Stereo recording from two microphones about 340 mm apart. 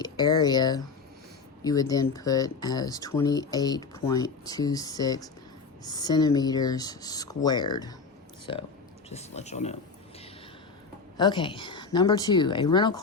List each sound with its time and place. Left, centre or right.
0.0 s speech: centre
9.0 s speech: centre
11.2 s speech: centre